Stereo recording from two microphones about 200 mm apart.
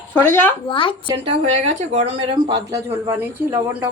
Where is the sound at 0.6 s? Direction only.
25° left (ahead or behind).